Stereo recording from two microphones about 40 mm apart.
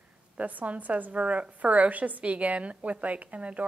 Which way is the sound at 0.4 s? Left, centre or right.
Right.